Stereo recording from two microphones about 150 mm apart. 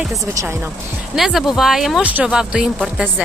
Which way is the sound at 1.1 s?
Centre (ahead or behind).